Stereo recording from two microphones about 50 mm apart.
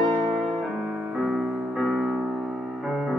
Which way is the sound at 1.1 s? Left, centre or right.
Centre.